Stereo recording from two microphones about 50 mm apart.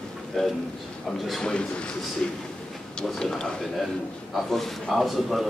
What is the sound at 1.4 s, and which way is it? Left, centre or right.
Speech, centre.